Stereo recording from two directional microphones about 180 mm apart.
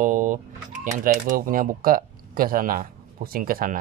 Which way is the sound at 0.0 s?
45° right (ahead or behind).